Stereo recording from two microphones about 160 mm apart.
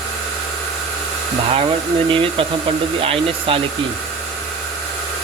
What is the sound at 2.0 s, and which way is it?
Speech, 35° right (ahead or behind).